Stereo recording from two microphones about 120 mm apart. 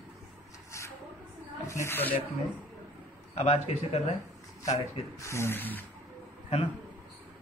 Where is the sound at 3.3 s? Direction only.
60° left (ahead or behind).